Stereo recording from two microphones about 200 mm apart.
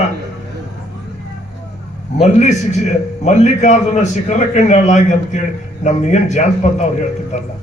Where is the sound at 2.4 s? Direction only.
35° left (ahead or behind).